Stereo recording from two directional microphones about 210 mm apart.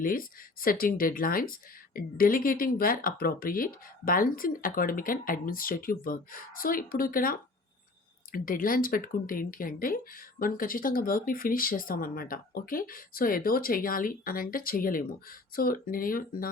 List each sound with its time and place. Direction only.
0.0 s speech: 40° left (ahead or behind)